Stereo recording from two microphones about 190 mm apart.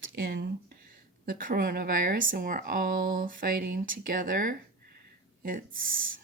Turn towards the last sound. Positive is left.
turn(degrees=-45)  # may be behind; listen again after turning